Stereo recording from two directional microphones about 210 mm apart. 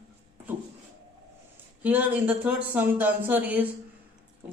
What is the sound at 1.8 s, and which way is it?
Speech, 5° right (ahead or behind).